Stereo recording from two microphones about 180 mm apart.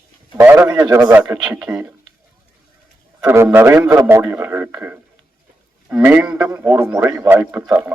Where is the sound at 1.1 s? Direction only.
10° right (ahead or behind).